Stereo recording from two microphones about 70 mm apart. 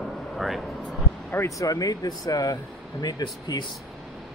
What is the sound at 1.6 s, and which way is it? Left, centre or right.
Speech, left.